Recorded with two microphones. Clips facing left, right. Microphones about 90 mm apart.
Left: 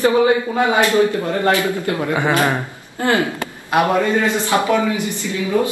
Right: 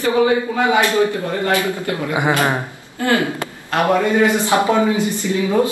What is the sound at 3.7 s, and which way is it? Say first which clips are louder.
Speech: left 2 dB; 15° left (ahead or behind).